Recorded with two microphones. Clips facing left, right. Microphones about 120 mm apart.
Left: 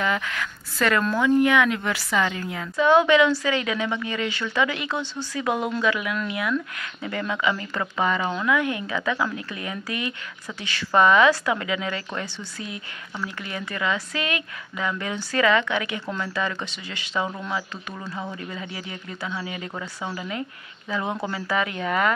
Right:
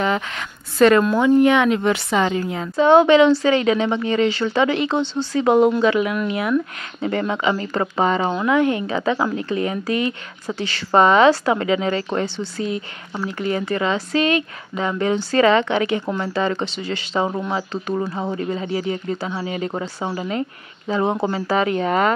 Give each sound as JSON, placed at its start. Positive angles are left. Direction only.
{"t": 0.0, "sound": "a woman's voice", "side_deg": -30}